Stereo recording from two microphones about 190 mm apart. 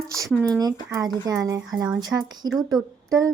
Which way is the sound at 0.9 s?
20° right (ahead or behind).